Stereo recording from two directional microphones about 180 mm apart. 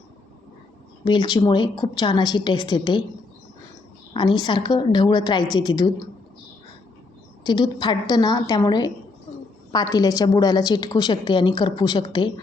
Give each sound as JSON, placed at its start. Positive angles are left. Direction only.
{"t": 1.0, "sound": "a woman's voice", "side_deg": 25}
{"t": 4.1, "sound": "a woman's voice", "side_deg": 25}
{"t": 7.4, "sound": "a woman's voice", "side_deg": 25}